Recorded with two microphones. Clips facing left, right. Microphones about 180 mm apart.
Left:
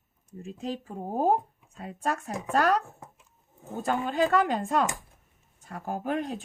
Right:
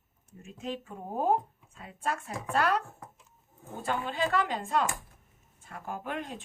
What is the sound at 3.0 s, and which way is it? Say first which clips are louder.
Dog: even; 25° left (ahead or behind).